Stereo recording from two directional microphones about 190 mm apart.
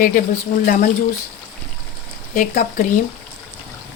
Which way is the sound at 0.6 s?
45° left (ahead or behind).